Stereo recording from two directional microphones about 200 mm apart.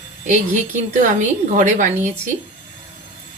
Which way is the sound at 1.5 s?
40° right (ahead or behind).